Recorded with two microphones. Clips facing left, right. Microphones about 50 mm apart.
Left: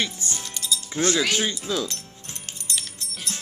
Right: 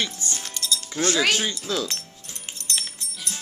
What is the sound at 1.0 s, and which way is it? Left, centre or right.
Speech, centre.